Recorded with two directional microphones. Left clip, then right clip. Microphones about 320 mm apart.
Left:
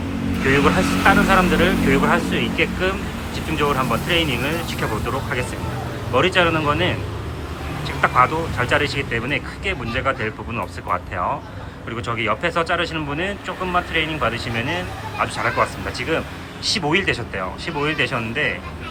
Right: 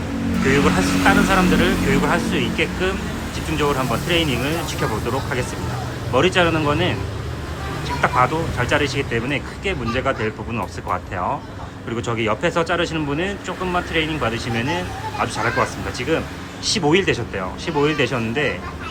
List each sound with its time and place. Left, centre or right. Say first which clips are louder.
0.5 s speech: left 1 dB; centre
6.1 s speech: even; centre
8.0 s speech: left 2 dB; centre